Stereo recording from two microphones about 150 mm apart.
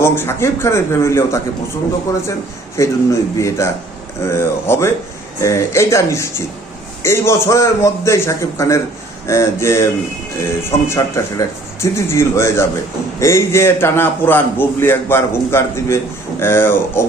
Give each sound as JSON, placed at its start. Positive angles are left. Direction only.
{"t": 0.0, "sound": "a man's voice", "side_deg": 15}
{"t": 2.7, "sound": "a man's voice", "side_deg": 20}